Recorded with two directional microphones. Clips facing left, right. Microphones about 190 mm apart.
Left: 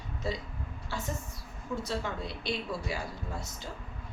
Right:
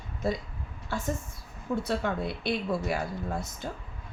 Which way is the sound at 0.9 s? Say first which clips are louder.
Right 5 dB; 50° right (ahead or behind).